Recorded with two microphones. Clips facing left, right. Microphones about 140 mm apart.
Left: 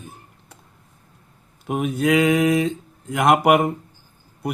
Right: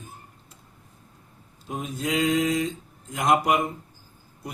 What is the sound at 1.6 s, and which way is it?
Speech, 65° left (ahead or behind).